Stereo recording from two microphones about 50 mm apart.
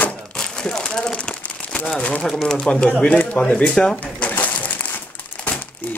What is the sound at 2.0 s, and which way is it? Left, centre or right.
Speech, left.